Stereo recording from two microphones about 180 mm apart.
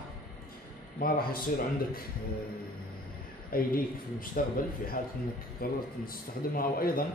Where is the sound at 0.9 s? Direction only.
55° left (ahead or behind).